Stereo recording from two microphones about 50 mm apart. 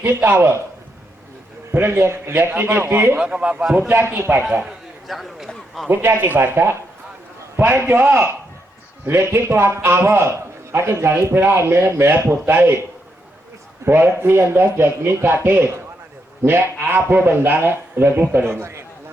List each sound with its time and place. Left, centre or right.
0.0 s a man's voice: right
1.7 s a man's voice: right
2.5 s a man's voice: right
3.2 s a man's voice: right
5.0 s speech: centre
5.9 s a man's voice: right
7.6 s a man's voice: right
9.0 s a man's voice: right
13.8 s a man's voice: right